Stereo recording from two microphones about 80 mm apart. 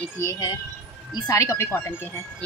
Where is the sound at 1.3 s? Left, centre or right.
Left.